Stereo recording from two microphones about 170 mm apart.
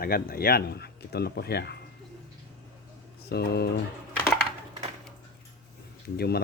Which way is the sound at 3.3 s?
70° left (ahead or behind).